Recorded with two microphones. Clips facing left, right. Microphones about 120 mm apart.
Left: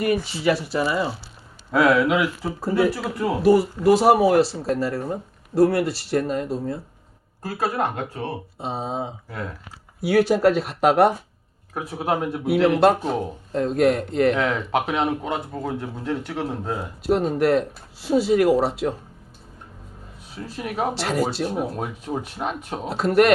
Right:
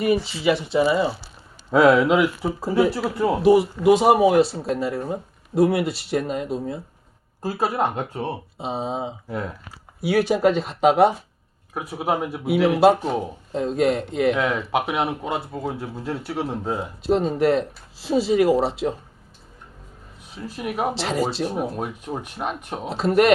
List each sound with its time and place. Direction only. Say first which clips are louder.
0.7 s speech: right 4 dB; 20° right (ahead or behind)
3.8 s speech: even; centre (ahead or behind)
7.4 s speech: right 1 dB; 20° right (ahead or behind)
8.5 s a sound: right 1 dB; centre (ahead or behind)
8.8 s speech: right 1 dB; 15° right (ahead or behind)
10.4 s speech: even; 5° left (ahead or behind)
17.0 s speech: even; 5° left (ahead or behind)
20.6 s speech: even; 5° right (ahead or behind)